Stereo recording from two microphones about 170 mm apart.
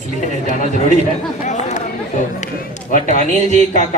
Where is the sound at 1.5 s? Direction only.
45° left (ahead or behind).